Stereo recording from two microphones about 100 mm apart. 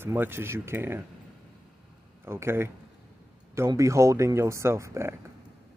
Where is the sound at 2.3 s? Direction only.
25° right (ahead or behind).